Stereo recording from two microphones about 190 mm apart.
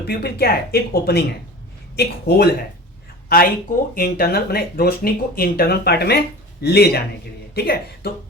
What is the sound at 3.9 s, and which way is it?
Speech, 50° left (ahead or behind).